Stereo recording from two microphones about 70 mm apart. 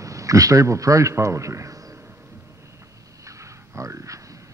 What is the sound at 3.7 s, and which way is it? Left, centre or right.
Speech, right.